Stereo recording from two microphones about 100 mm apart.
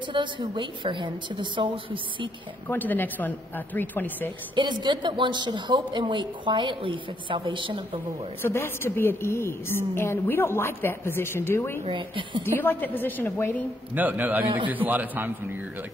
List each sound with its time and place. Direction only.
0.1 s speech: 55° right (ahead or behind)
2.7 s a woman's voice: 20° left (ahead or behind)
4.6 s speech: 50° right (ahead or behind)
8.4 s a woman's voice: 25° left (ahead or behind)
11.8 s a woman's voice: 55° right (ahead or behind)
12.4 s a woman's voice: 20° left (ahead or behind)
13.9 s a man's voice: 15° right (ahead or behind)